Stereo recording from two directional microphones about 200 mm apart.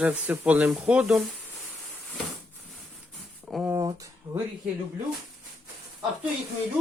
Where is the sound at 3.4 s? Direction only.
5° right (ahead or behind).